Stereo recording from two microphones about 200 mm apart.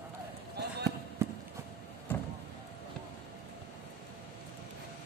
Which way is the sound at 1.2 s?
15° right (ahead or behind).